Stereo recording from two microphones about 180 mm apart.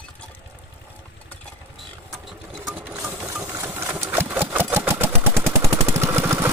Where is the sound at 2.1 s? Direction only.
Centre (ahead or behind).